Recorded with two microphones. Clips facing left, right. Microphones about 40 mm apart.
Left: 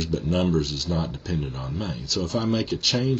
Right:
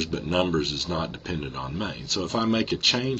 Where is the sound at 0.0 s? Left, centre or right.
Right.